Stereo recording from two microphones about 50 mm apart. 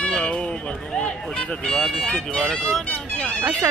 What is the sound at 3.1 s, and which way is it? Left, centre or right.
Music, left.